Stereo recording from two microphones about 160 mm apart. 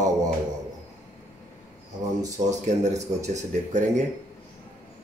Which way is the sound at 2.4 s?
45° right (ahead or behind).